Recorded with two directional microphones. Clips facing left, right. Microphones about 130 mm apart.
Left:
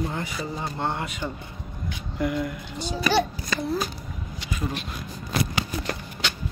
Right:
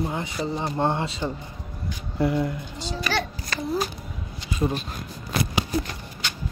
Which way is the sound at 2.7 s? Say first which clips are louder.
Left 6 dB; 15° left (ahead or behind).